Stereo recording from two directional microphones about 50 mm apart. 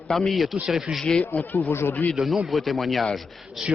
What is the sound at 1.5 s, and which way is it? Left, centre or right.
Speech, left.